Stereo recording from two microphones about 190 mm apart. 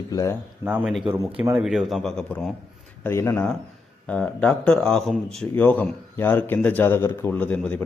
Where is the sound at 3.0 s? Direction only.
15° left (ahead or behind).